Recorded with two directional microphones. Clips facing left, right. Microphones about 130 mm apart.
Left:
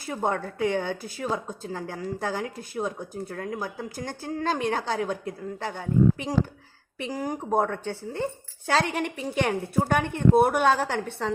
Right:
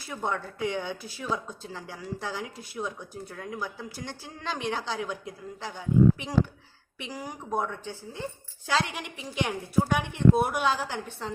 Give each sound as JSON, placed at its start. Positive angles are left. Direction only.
{"t": 0.0, "sound": "a woman's voice", "side_deg": 45}
{"t": 6.1, "sound": "a woman's voice", "side_deg": 45}